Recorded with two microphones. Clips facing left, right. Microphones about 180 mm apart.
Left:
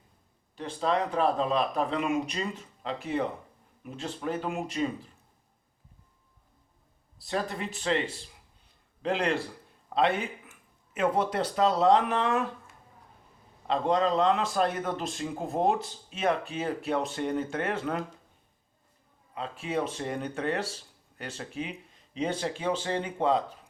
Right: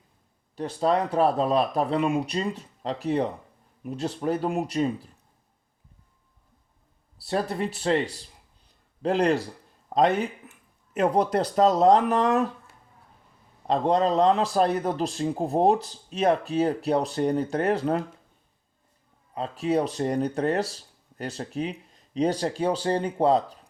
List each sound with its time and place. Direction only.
0.8 s a man's voice: 35° right (ahead or behind)
7.2 s a man's voice: 35° right (ahead or behind)
8.6 s a sound: 40° right (ahead or behind)
9.9 s a man's voice: 40° right (ahead or behind)
13.7 s a man's voice: 40° right (ahead or behind)
19.3 s a man's voice: 40° right (ahead or behind)